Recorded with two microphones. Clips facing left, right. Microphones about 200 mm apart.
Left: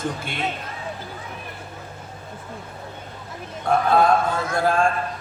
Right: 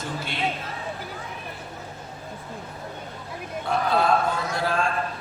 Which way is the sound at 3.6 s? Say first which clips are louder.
Left 5 dB; 50° left (ahead or behind).